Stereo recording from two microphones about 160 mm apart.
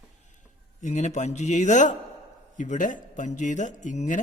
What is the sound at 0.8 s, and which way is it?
A man's voice, 50° left (ahead or behind).